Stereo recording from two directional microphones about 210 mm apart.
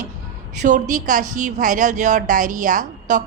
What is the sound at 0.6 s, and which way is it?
A woman's voice, 35° right (ahead or behind).